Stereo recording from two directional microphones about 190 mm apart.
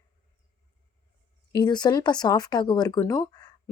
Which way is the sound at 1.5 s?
25° left (ahead or behind).